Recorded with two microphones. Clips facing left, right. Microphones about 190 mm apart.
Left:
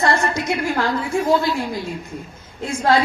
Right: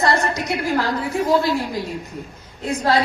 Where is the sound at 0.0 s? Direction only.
35° right (ahead or behind).